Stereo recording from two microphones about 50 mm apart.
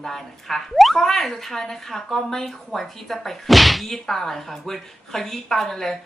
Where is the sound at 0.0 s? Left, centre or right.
Centre.